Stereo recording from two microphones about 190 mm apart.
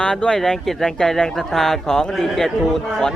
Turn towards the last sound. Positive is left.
turn(degrees=0)  # may be behind; listen again after turning